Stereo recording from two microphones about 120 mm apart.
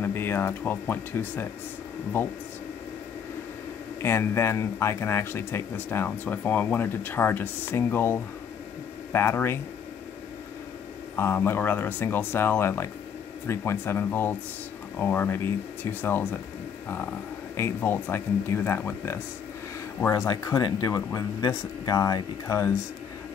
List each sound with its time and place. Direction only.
0.0 s speech: 20° left (ahead or behind)
4.0 s speech: 20° left (ahead or behind)
11.1 s speech: 20° left (ahead or behind)
17.6 s speech: 20° left (ahead or behind)